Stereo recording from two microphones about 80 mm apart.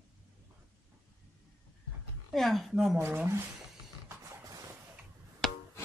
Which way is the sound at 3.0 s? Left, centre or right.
Right.